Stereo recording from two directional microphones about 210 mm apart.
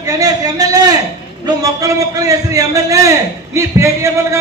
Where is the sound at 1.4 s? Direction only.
15° right (ahead or behind).